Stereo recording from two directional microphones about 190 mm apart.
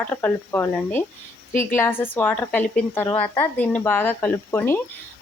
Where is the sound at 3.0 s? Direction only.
30° left (ahead or behind).